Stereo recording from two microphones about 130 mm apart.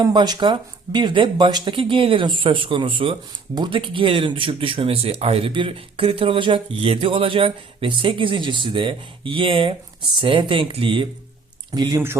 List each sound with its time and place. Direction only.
0.0 s speech: 35° right (ahead or behind)
11.7 s speech: 30° right (ahead or behind)